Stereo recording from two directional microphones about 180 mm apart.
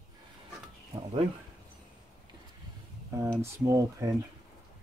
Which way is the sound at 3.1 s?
15° right (ahead or behind).